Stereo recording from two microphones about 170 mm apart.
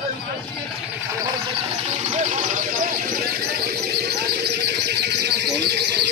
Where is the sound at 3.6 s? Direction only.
70° right (ahead or behind).